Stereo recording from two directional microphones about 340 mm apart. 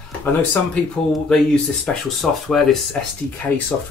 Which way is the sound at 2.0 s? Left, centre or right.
Centre.